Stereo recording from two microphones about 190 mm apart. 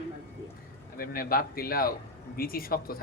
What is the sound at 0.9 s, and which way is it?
A man's voice, 50° left (ahead or behind).